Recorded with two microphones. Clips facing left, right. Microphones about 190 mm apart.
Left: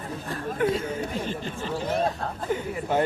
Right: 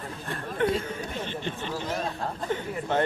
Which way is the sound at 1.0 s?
40° left (ahead or behind).